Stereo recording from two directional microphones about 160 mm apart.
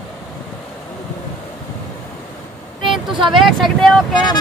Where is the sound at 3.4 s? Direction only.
Centre (ahead or behind).